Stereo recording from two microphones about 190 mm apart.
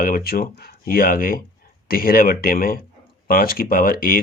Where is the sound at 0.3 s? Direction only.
50° left (ahead or behind).